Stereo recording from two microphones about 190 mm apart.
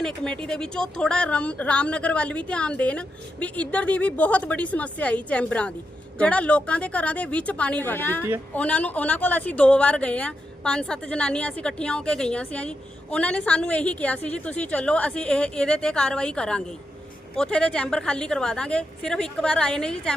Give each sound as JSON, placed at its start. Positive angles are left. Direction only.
{"t": 0.4, "sound": "a woman's voice", "side_deg": 5}